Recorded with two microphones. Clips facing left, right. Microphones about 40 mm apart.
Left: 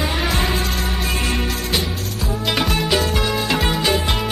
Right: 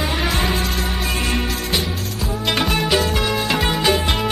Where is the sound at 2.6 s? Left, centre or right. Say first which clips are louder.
Right 1 dB; centre.